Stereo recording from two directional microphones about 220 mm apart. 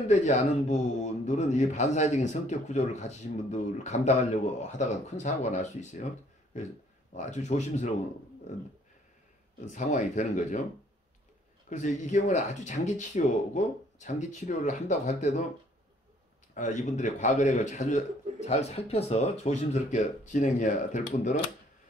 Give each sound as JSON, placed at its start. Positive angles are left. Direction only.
{"t": 0.1, "sound": "speech", "side_deg": 30}
{"t": 7.2, "sound": "speech", "side_deg": 30}
{"t": 9.7, "sound": "speech", "side_deg": 35}
{"t": 11.7, "sound": "speech", "side_deg": 35}
{"t": 16.5, "sound": "speech", "side_deg": 35}